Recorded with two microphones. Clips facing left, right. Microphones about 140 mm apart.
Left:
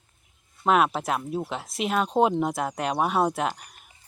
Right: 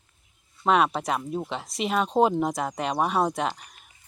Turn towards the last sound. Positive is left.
turn(degrees=0)  # may be behind; listen again after turning